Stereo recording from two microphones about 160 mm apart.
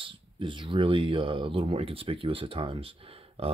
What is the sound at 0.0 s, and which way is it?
Speech, 30° right (ahead or behind).